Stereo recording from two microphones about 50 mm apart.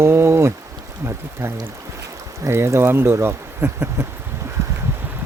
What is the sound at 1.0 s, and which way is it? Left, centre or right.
Speech, right.